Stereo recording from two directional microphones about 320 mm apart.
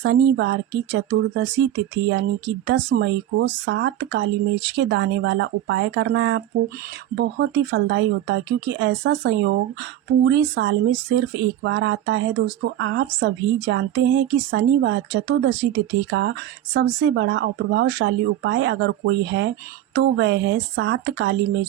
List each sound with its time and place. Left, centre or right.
0.0 s speech: right